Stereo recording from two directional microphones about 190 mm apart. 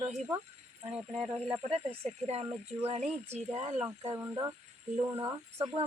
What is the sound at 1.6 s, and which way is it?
Speech, 30° right (ahead or behind).